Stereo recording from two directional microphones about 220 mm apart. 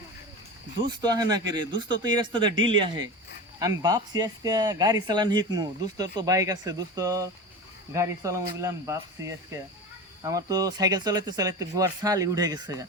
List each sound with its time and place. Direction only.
0.9 s speech: 20° right (ahead or behind)